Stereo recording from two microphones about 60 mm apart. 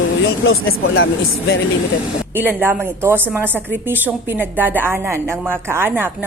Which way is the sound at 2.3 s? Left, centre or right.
Right.